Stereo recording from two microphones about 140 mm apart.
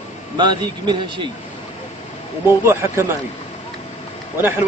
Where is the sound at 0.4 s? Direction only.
35° right (ahead or behind).